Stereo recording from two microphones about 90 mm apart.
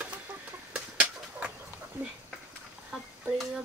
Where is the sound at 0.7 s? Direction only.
10° right (ahead or behind).